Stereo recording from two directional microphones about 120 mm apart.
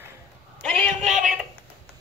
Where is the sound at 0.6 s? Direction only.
15° left (ahead or behind).